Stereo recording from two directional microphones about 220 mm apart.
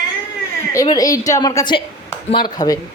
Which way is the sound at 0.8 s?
15° left (ahead or behind).